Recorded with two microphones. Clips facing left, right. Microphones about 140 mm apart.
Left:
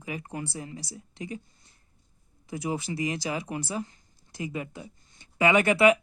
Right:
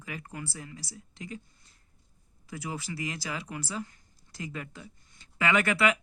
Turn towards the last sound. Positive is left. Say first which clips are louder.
# left 6 dB
turn(degrees=20)  # may be behind; listen again after turning